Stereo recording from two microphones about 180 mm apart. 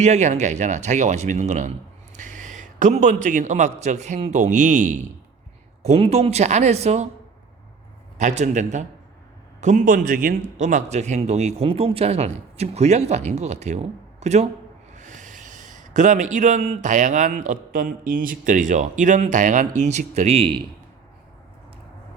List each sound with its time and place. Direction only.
0.0 s speech: 40° right (ahead or behind)
2.1 s a sound: 45° right (ahead or behind)
3.2 s speech: 45° right (ahead or behind)
8.2 s a man's voice: 40° right (ahead or behind)